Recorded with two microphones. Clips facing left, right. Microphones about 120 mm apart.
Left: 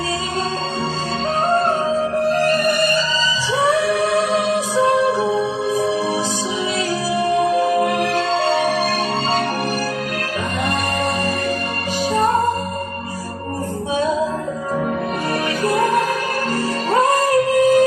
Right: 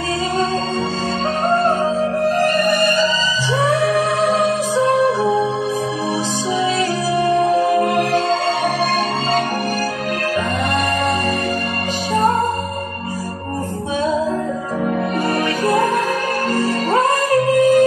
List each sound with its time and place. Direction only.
2.3 s music: 45° right (ahead or behind)
7.8 s music: 45° right (ahead or behind)
15.6 s music: 45° right (ahead or behind)
17.6 s music: 45° left (ahead or behind)